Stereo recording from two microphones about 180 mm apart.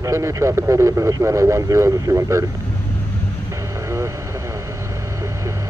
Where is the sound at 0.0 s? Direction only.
15° right (ahead or behind).